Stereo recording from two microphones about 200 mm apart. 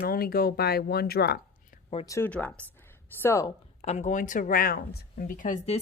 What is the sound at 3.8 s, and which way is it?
A woman's voice, 35° left (ahead or behind).